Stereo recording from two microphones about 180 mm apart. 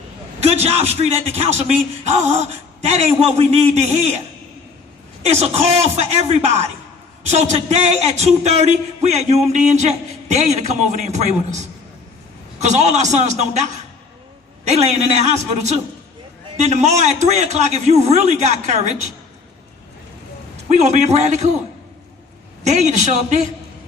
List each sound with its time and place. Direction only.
0.3 s speech: 35° right (ahead or behind)
5.2 s speech: 35° right (ahead or behind)
14.7 s speech: 35° right (ahead or behind)
20.7 s speech: 40° right (ahead or behind)
22.6 s speech: 40° right (ahead or behind)